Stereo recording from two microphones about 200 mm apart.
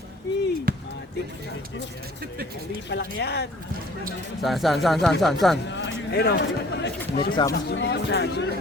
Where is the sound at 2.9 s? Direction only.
55° left (ahead or behind).